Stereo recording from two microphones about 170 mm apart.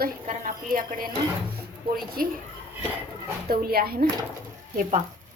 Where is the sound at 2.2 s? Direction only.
60° right (ahead or behind).